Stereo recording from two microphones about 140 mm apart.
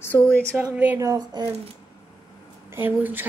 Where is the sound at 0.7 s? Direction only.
10° right (ahead or behind).